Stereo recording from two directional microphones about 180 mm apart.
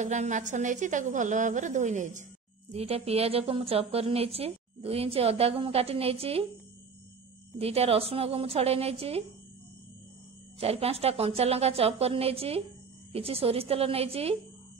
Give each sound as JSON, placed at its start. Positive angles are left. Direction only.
{"t": 0.0, "sound": "a woman's voice", "side_deg": -40}
{"t": 7.5, "sound": "a woman's voice", "side_deg": -35}
{"t": 10.6, "sound": "a woman's voice", "side_deg": -35}